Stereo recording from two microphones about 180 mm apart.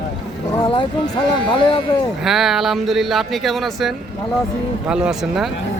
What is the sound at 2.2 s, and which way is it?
Speech, centre (ahead or behind).